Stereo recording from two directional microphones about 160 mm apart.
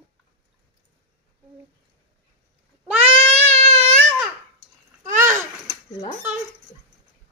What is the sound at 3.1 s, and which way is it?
Baby cry, 40° right (ahead or behind).